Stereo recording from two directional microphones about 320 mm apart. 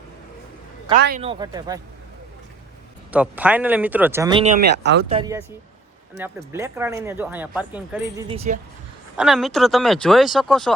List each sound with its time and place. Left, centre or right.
0.9 s speech: right; by 1.8 s centre
3.1 s speech: centre
4.8 s speech: right
5.0 s speech: centre